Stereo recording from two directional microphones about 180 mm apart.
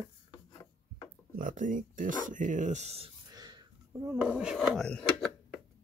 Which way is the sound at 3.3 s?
20° right (ahead or behind).